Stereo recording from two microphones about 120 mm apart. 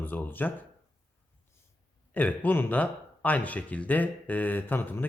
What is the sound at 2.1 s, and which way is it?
Speech, 15° left (ahead or behind).